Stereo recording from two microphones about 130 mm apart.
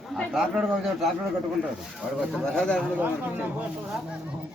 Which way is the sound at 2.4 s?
5° left (ahead or behind).